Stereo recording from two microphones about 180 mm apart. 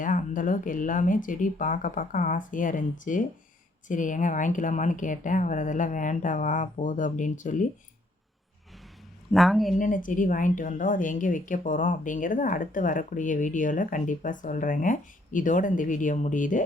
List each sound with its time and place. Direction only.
0.0 s a woman's voice: 50° left (ahead or behind)
9.3 s a woman's voice: centre (ahead or behind)
9.7 s a woman's voice: 45° left (ahead or behind)